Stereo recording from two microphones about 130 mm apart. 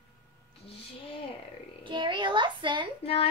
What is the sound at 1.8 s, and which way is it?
A child's voice, 35° right (ahead or behind).